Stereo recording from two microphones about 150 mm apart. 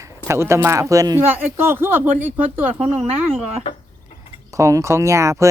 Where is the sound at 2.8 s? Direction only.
40° right (ahead or behind).